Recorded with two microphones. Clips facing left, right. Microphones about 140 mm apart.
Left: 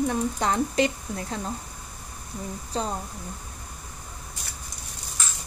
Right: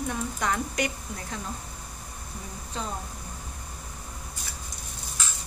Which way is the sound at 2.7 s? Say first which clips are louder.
Left 6 dB; 35° left (ahead or behind).